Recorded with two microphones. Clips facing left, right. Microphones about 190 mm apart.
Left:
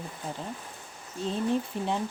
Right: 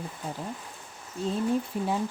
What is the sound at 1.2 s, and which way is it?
Speech, 5° right (ahead or behind).